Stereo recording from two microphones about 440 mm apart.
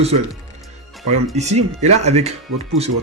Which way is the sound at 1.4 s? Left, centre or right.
Centre.